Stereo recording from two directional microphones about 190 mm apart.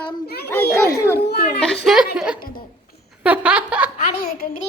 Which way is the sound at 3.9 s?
30° left (ahead or behind).